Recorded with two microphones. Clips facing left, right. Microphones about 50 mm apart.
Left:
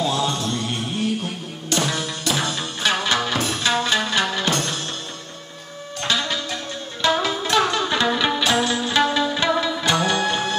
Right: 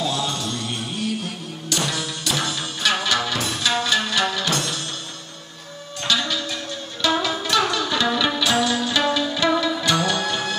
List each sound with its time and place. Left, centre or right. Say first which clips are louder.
0.0 s music: left 3 dB; left
6.0 s music: even; left